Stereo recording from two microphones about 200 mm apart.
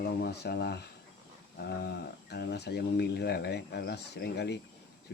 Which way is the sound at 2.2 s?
55° left (ahead or behind).